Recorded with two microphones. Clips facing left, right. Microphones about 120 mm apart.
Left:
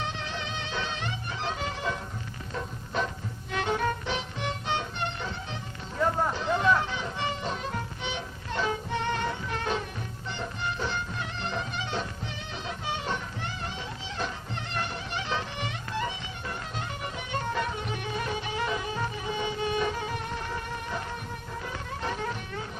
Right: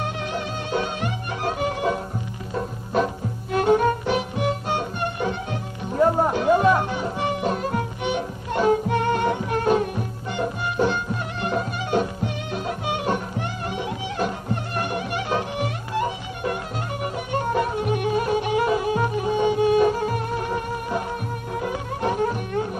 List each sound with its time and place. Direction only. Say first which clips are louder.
0.0 s music: right 7 dB; 50° right (ahead or behind)
3.5 s music: right 10 dB; 45° right (ahead or behind)
6.0 s music: right 8 dB; 35° right (ahead or behind)